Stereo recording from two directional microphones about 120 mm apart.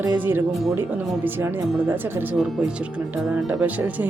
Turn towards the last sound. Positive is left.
turn(degrees=-15)  # may be behind; listen again after turning